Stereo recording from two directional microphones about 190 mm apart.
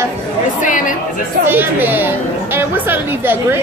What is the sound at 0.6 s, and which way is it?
Speech, 45° left (ahead or behind).